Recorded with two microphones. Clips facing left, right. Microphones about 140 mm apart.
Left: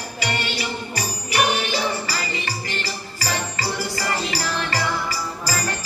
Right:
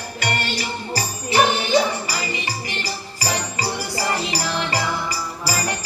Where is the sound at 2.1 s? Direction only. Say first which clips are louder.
Right 1 dB; 15° right (ahead or behind).